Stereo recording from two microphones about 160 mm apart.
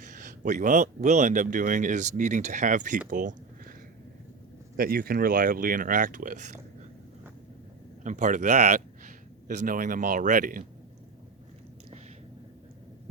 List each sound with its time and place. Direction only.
0.0 s speech: 50° right (ahead or behind)
4.8 s speech: 70° right (ahead or behind); by 6.6 s 50° right (ahead or behind)
8.0 s a man's voice: 50° right (ahead or behind)